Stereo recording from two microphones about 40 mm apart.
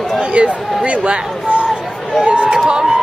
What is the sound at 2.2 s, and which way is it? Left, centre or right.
Speech, right.